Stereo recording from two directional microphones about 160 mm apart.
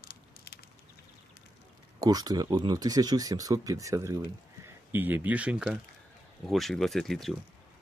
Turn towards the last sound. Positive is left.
turn(degrees=0)  # may be behind; listen again after turning